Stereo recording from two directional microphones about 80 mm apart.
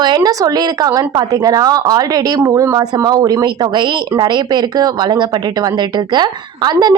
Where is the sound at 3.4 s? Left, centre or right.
Right.